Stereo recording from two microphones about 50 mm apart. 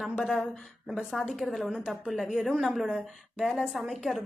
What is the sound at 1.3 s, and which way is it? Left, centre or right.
A woman's voice, centre.